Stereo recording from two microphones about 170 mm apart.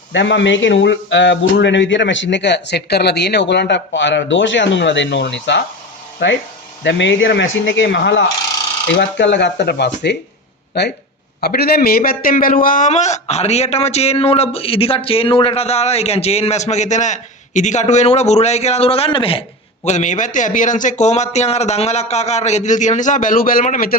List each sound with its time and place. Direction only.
0.1 s speech: 90° left
11.3 s a man's voice: 65° left (ahead or behind)